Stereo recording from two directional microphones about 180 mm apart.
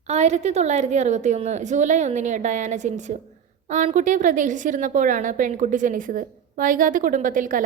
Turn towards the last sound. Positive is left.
turn(degrees=-50)  # may be behind; listen again after turning